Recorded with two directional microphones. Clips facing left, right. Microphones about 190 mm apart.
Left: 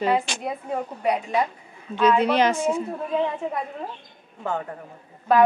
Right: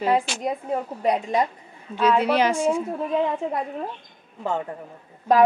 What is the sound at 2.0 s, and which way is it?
Speech, 10° right (ahead or behind).